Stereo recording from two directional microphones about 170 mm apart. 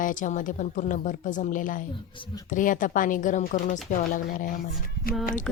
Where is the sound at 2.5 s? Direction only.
50° left (ahead or behind).